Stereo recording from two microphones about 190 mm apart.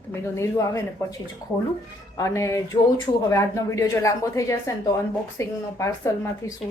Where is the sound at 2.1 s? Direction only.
15° left (ahead or behind).